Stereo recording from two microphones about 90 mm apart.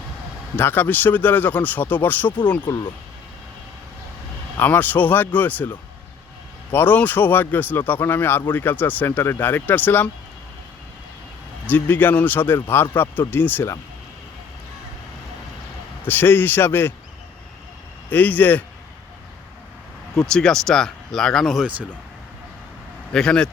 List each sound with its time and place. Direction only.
0.5 s speech: 20° left (ahead or behind)
2.6 s speech: 50° left (ahead or behind)
4.5 s speech: 20° left (ahead or behind)
11.6 s speech: 20° left (ahead or behind)
16.0 s speech: 25° left (ahead or behind)
18.1 s speech: 20° left (ahead or behind)
20.2 s speech: 5° left (ahead or behind)
23.1 s speech: 10° left (ahead or behind)